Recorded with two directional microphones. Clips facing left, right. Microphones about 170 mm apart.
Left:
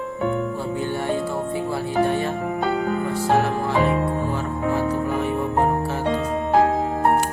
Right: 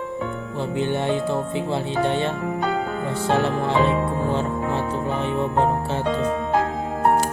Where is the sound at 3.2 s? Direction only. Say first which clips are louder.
Even; 25° right (ahead or behind).